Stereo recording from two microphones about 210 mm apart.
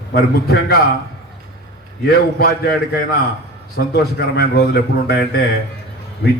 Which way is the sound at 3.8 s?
55° left (ahead or behind).